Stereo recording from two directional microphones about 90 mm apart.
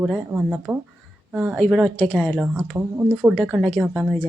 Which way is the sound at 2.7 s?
25° right (ahead or behind).